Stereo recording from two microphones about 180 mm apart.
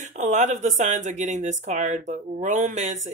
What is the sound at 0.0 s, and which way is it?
Speech, 40° right (ahead or behind).